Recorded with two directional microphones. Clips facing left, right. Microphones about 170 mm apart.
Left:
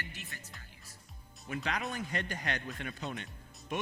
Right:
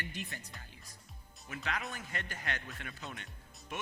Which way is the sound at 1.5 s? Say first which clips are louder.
Left 4 dB; 25° left (ahead or behind).